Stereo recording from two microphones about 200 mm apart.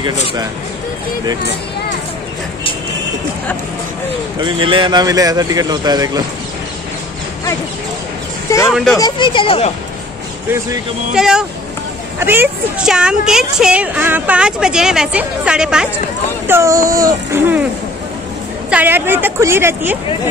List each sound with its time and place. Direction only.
4.4 s speech: 25° right (ahead or behind)
8.6 s speech: centre (ahead or behind)
8.9 s speech: 20° left (ahead or behind)
11.1 s a woman's voice: centre (ahead or behind)
18.7 s a woman's voice: 10° right (ahead or behind)